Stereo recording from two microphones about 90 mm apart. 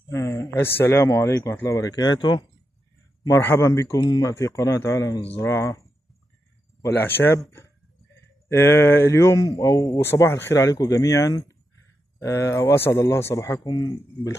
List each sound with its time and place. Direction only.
0.1 s speech: 35° left (ahead or behind)
1.8 s speech: 45° left (ahead or behind)
3.4 s a man's voice: 30° left (ahead or behind)
6.8 s speech: 25° left (ahead or behind)
10.6 s a man's voice: 40° left (ahead or behind)